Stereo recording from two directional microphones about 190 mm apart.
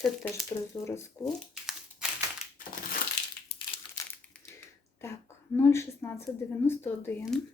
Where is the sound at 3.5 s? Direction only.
25° left (ahead or behind).